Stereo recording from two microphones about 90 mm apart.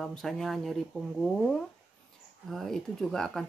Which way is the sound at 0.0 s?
5° left (ahead or behind).